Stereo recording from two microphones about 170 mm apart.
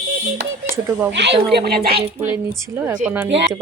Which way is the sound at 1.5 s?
70° right (ahead or behind).